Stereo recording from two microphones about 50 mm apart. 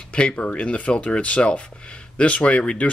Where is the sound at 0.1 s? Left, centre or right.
Left.